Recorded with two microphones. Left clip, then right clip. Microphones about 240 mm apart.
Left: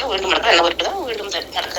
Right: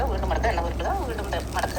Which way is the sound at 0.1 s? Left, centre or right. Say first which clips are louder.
Left 11 dB; left.